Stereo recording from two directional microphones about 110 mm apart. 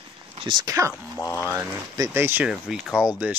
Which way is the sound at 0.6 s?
30° right (ahead or behind).